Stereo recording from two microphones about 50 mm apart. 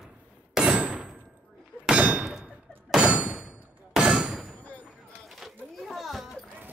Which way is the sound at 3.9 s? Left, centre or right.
Centre.